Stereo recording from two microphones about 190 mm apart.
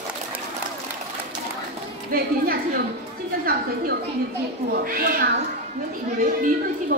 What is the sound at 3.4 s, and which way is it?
A woman's voice, 50° right (ahead or behind).